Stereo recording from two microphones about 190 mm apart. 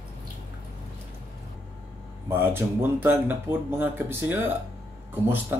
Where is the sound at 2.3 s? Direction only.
10° right (ahead or behind).